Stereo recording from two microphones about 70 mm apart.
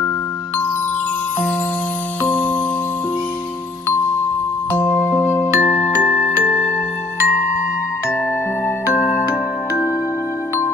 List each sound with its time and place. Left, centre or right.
2.2 s music: left
4.7 s music: left
6.1 s glockenspiel: left